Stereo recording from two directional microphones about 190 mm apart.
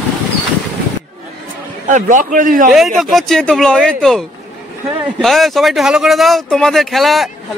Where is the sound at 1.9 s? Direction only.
45° right (ahead or behind).